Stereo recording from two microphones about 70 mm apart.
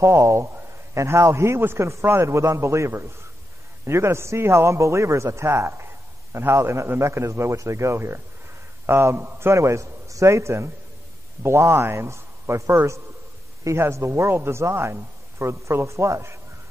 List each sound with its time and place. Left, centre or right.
0.0 s a man's voice: right